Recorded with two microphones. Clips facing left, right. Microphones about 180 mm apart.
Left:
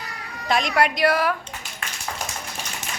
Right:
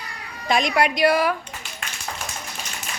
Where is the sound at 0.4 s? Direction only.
Centre (ahead or behind).